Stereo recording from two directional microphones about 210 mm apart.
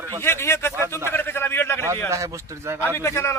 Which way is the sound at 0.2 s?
10° left (ahead or behind).